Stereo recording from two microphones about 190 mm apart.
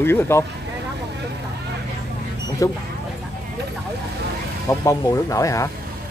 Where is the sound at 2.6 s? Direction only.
15° left (ahead or behind).